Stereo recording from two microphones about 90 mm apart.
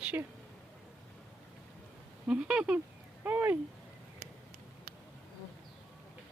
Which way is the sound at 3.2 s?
20° right (ahead or behind).